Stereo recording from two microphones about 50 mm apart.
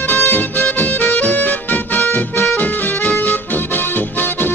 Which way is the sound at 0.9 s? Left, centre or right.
Left.